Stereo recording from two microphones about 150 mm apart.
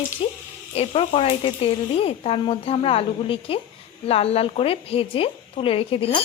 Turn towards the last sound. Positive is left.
turn(degrees=35)  # may be behind; listen again after turning